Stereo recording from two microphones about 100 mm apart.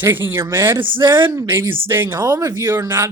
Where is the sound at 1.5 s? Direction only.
20° right (ahead or behind).